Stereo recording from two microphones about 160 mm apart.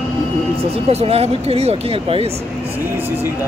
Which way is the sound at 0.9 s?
40° right (ahead or behind).